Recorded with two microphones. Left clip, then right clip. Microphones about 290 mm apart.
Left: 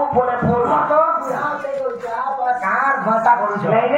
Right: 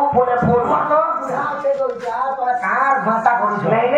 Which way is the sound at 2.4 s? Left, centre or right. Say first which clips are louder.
Even; centre.